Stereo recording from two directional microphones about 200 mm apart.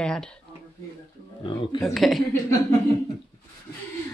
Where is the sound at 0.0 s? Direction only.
5° left (ahead or behind).